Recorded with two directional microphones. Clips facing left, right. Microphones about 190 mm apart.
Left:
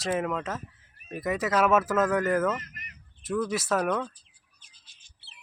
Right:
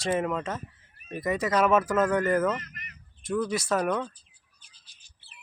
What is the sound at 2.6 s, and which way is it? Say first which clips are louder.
Bird: right 2 dB; 45° right (ahead or behind).